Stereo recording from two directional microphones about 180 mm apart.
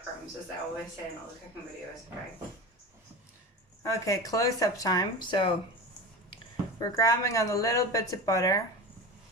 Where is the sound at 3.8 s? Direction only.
15° left (ahead or behind).